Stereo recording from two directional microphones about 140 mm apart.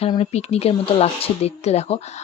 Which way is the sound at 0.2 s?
50° left (ahead or behind).